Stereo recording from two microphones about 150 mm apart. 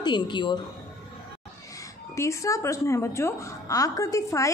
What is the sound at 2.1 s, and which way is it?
A woman's voice, 20° left (ahead or behind).